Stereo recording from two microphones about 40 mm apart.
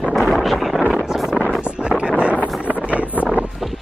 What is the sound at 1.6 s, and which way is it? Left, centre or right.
Wind noise, right.